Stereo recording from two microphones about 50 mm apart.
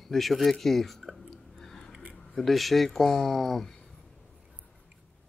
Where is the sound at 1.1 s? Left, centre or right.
Centre.